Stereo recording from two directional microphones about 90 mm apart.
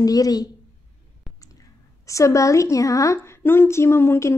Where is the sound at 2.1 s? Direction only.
35° left (ahead or behind).